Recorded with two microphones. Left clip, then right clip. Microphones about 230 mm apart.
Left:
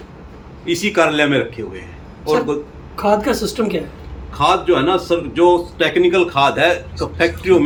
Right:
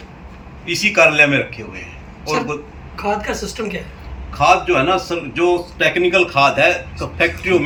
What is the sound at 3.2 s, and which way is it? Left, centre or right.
Speech, left.